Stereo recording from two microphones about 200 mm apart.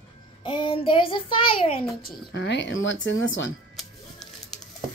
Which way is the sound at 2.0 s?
55° left (ahead or behind).